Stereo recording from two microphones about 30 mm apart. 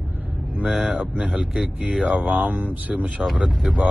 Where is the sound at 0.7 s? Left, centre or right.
Right.